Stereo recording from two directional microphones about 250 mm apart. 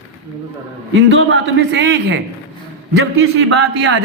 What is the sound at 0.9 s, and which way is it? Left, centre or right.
A man's voice, right.